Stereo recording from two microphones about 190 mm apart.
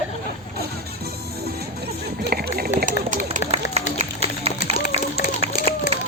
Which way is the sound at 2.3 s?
55° right (ahead or behind).